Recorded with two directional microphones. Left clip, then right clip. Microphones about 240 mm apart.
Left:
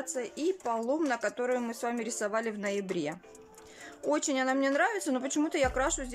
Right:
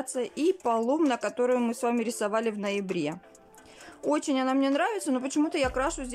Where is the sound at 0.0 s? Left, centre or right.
Centre.